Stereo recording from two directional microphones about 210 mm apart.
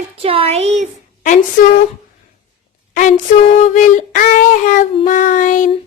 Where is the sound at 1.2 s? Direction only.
35° left (ahead or behind).